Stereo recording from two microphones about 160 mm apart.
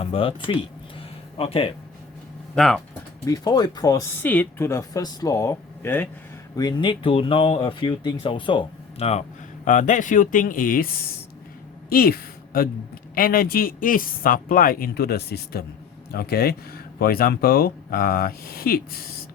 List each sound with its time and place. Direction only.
0.0 s speech: 35° left (ahead or behind)
2.6 s speech: 5° left (ahead or behind)
3.2 s speech: 20° left (ahead or behind)
4.2 s speech: 10° left (ahead or behind)
6.6 s speech: 30° left (ahead or behind)
9.6 s speech: 50° left (ahead or behind); by 11.2 s 70° left (ahead or behind)
11.9 s a sound: 70° left (ahead or behind)
13.1 s speech: 65° left (ahead or behind)